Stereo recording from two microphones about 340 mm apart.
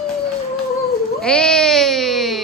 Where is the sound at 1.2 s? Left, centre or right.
Centre.